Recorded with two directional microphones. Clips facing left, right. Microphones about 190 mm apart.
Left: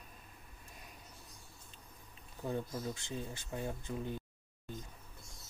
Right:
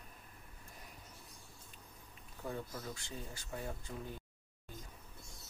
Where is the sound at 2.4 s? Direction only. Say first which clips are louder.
Left 5 dB; 25° left (ahead or behind).